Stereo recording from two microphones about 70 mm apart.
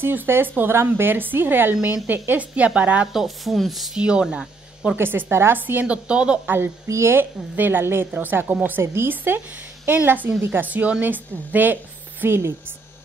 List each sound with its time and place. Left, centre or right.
0.0 s a woman's voice: right
3.1 s speech: centre
3.9 s speech: centre
4.9 s a woman's voice: right
6.0 s speech: centre
6.4 s a woman's voice: right
6.9 s a woman's voice: right
7.5 s a woman's voice: right
12.4 s a woman's voice: right